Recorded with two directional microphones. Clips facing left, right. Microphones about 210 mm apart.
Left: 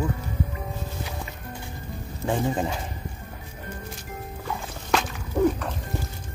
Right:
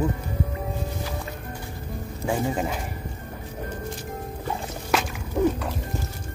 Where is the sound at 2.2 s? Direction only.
10° right (ahead or behind).